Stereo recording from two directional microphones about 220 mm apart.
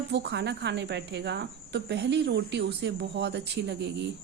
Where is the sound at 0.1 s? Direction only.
50° right (ahead or behind).